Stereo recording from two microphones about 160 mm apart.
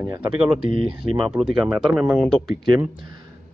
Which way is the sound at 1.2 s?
5° right (ahead or behind).